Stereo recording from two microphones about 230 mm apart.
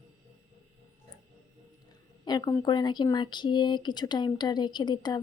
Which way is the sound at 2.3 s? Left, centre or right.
Centre.